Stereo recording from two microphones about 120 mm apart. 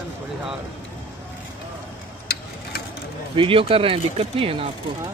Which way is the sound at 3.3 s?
50° right (ahead or behind).